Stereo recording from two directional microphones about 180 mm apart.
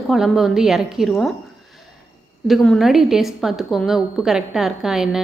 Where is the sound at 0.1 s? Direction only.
Centre (ahead or behind).